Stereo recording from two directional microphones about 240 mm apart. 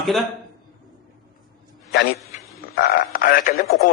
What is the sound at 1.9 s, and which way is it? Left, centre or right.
A man's voice, left.